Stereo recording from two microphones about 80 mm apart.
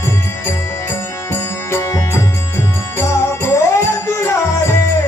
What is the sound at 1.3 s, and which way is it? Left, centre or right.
Music, left.